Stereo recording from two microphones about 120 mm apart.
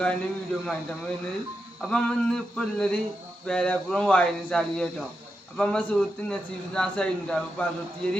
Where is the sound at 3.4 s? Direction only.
10° left (ahead or behind).